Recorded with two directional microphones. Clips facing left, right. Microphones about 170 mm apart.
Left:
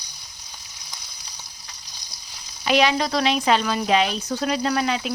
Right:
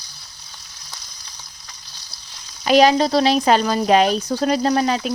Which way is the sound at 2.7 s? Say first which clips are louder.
Right 6 dB; 40° right (ahead or behind).